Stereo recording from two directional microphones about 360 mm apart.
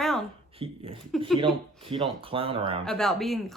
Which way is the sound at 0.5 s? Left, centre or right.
Centre.